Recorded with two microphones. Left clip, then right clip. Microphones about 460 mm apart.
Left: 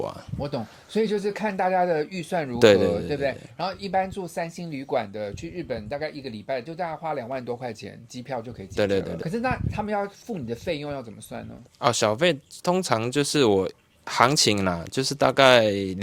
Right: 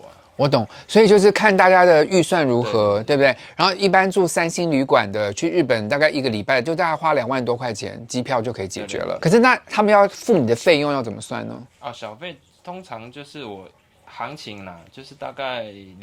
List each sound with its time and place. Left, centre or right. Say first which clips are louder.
0.3 s speech: right 16 dB; right
11.8 s speech: left 12 dB; left